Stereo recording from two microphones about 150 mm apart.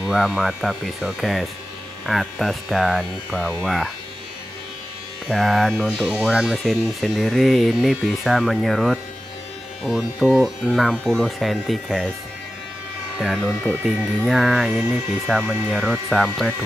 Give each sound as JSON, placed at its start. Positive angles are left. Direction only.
{"t": 0.0, "sound": "speech", "side_deg": -5}
{"t": 5.3, "sound": "speech", "side_deg": 0}
{"t": 13.8, "sound": "speech", "side_deg": 0}